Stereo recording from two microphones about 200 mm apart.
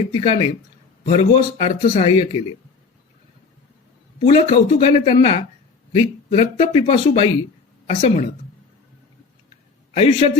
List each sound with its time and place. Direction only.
0.1 s a man's voice: 25° left (ahead or behind)
4.2 s a man's voice: 35° left (ahead or behind)
9.9 s a man's voice: 30° left (ahead or behind)